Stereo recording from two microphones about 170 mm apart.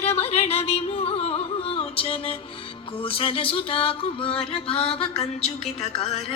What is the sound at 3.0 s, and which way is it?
Music, 30° left (ahead or behind).